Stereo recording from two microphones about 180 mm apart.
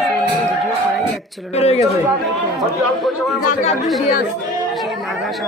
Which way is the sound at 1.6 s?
35° left (ahead or behind).